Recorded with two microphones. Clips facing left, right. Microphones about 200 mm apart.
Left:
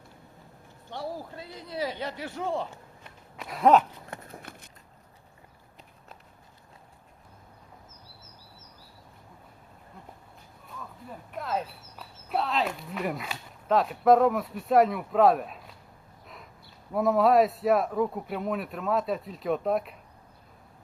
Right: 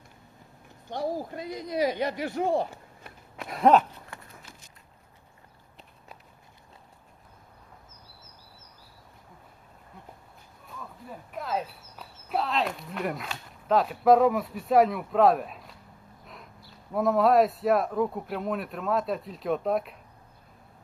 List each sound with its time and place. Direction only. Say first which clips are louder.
1.4 s speech: right 6 dB; 15° right (ahead or behind)
3.5 s speech: even; 5° left (ahead or behind)
4.1 s a sound: left 5 dB; 50° left (ahead or behind)
10.7 s speech: right 1 dB; centre (ahead or behind)
16.2 s a sound: even; centre (ahead or behind)
16.9 s speech: even; centre (ahead or behind)